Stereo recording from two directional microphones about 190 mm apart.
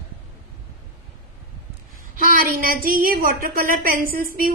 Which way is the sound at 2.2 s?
45° right (ahead or behind).